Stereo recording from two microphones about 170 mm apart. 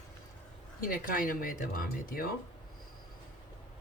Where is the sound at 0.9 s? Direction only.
55° left (ahead or behind).